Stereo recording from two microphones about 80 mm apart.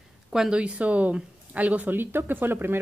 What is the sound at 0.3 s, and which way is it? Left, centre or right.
Speech, centre.